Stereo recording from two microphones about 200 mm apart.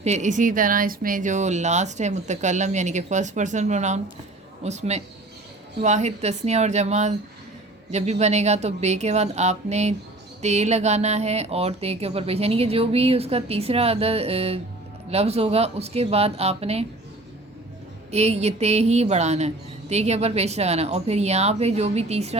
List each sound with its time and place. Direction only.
0.0 s speech: 35° right (ahead or behind)
18.1 s speech: 30° right (ahead or behind)